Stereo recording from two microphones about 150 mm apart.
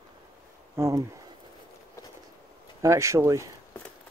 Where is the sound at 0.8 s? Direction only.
20° right (ahead or behind).